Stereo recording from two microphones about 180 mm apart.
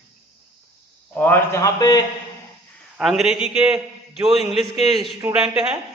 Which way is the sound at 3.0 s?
Centre (ahead or behind).